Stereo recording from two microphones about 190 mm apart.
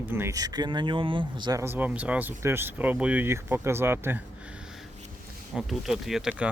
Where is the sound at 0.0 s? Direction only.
10° right (ahead or behind).